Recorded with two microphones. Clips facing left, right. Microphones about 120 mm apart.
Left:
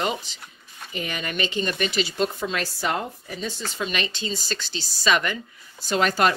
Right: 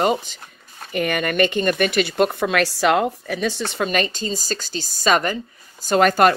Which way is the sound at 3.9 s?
45° right (ahead or behind).